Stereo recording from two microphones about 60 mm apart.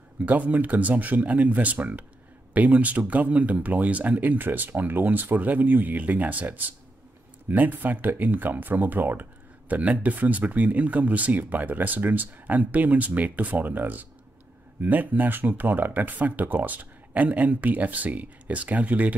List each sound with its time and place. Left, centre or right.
0.2 s speech: right